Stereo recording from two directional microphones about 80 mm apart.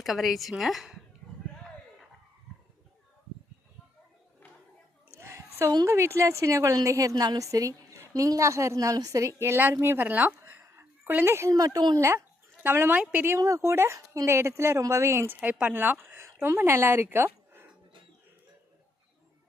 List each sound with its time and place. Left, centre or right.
0.0 s a woman's voice: centre
5.1 s a sound: right
5.8 s a woman's voice: right
11.5 s a woman's voice: right
11.9 s a woman's voice: right
13.0 s a woman's voice: centre
13.2 s a woman's voice: right
15.4 s a woman's voice: centre
15.8 s a sound: right
16.6 s a woman's voice: right